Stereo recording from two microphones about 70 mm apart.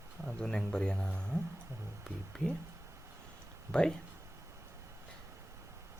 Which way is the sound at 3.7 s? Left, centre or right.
Centre.